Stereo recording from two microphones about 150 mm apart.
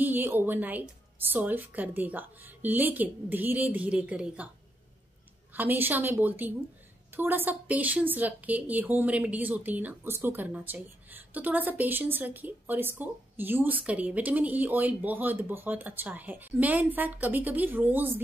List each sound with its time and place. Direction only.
0.0 s a woman's voice: 15° right (ahead or behind)
5.5 s a woman's voice: 10° right (ahead or behind)